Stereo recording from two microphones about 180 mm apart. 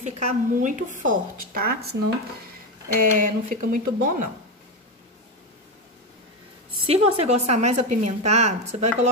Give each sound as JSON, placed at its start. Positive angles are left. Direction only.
{"t": 0.0, "sound": "a woman's voice", "side_deg": -40}
{"t": 2.9, "sound": "a woman's voice", "side_deg": -50}
{"t": 6.9, "sound": "a woman's voice", "side_deg": -35}